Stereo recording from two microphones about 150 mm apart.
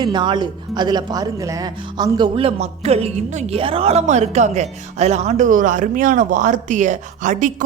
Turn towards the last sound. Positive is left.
turn(degrees=-55)  # may be behind; listen again after turning